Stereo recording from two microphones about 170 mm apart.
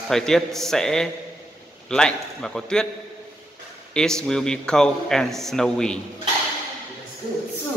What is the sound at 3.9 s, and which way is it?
A man's voice, 5° left (ahead or behind).